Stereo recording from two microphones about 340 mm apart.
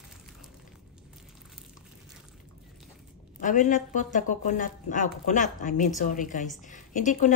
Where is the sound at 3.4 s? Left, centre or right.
Left.